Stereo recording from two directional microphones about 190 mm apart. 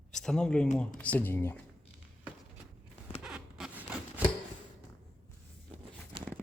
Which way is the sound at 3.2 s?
5° right (ahead or behind).